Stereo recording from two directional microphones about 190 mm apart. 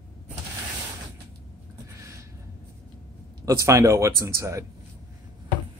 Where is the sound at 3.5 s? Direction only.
15° right (ahead or behind).